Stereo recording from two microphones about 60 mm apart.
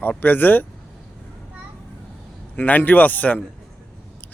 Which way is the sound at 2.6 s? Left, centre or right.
Left.